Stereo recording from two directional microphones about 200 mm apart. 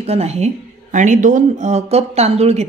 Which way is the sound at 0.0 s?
30° right (ahead or behind).